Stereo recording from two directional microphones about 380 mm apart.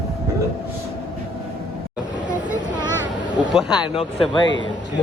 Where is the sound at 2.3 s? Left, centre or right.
Centre.